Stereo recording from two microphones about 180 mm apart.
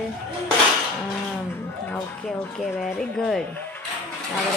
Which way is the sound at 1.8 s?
Centre (ahead or behind).